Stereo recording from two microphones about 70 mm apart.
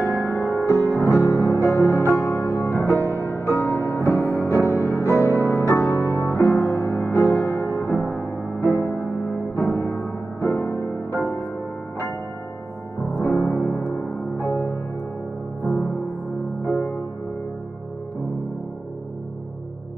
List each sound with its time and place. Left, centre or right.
0.3 s music: left
8.5 s music: right
9.2 s music: left
11.1 s music: right
13.4 s music: left